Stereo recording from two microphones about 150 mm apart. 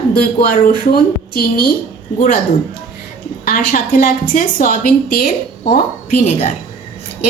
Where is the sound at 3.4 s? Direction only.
70° left (ahead or behind).